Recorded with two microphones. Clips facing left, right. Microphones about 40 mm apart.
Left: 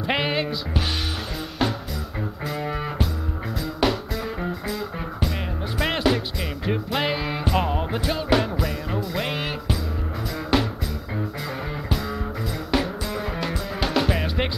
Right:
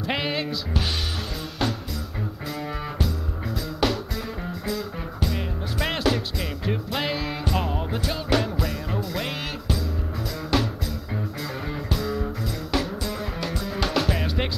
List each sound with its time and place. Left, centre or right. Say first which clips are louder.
0.0 s music: left 3 dB; centre
11.4 s music: left 1 dB; centre